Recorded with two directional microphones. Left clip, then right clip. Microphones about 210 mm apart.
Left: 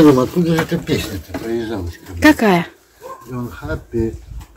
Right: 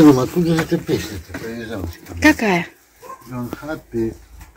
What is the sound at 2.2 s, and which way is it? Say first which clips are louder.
Speech: left 3 dB; 10° left (ahead or behind).